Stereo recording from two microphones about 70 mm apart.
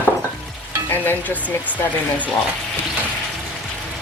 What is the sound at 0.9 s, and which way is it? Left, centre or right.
Speech, left.